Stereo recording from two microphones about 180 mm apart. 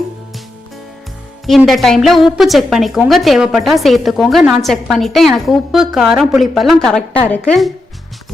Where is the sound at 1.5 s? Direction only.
Centre (ahead or behind).